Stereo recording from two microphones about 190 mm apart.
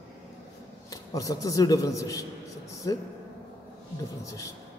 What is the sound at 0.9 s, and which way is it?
A man's voice, 20° left (ahead or behind).